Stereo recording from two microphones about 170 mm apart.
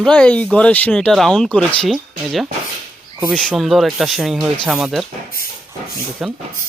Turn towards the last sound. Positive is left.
turn(degrees=0)  # may be behind; listen again after turning